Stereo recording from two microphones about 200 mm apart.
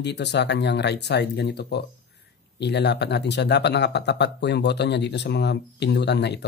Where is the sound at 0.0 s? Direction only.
60° left (ahead or behind).